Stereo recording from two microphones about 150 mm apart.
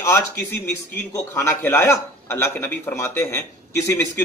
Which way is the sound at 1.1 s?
20° left (ahead or behind).